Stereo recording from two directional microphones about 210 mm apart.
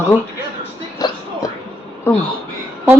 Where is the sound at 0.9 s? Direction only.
15° left (ahead or behind).